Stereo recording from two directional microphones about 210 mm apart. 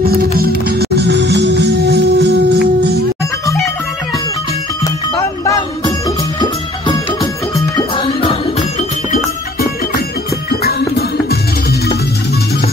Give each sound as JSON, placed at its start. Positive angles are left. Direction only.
{"t": 0.0, "sound": "music", "side_deg": -45}
{"t": 4.8, "sound": "music", "side_deg": 15}
{"t": 9.1, "sound": "music", "side_deg": 45}